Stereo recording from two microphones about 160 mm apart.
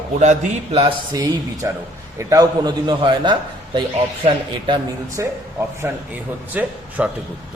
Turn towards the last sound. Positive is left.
turn(degrees=-10)  # may be behind; listen again after turning